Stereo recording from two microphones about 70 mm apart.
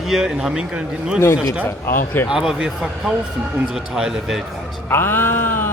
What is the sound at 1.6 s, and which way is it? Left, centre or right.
Speech, left.